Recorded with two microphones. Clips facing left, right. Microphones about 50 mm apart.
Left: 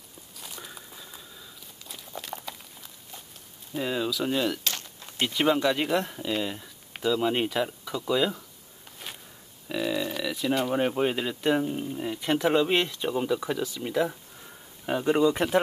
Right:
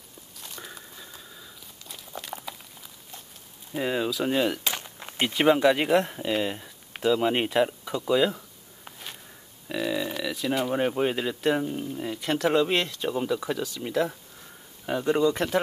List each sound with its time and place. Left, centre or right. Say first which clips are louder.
0.4 s a sound: right 1 dB; centre
3.7 s speech: right 2 dB; centre
9.7 s speech: even; centre